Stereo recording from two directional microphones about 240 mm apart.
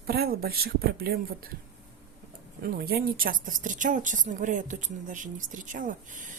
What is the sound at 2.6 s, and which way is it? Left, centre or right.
A woman's voice, right.